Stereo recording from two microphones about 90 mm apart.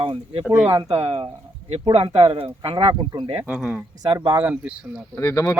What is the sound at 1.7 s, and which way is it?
Speech, 80° right.